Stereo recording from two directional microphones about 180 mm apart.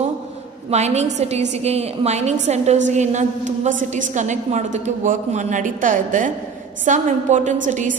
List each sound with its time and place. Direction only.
0.7 s a woman's voice: 40° right (ahead or behind)